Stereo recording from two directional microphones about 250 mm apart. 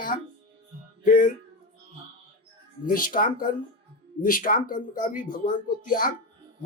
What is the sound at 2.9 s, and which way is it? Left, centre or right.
Speech, left.